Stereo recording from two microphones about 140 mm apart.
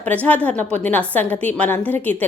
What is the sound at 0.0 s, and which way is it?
A woman's voice, 10° left (ahead or behind).